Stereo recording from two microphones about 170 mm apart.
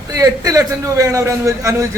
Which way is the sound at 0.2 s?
20° right (ahead or behind).